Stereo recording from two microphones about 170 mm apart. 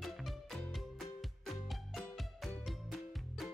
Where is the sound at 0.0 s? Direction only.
Centre (ahead or behind).